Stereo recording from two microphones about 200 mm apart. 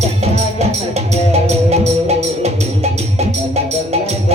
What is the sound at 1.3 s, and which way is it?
Music, 35° right (ahead or behind).